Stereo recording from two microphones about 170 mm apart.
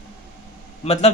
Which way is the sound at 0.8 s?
40° left (ahead or behind).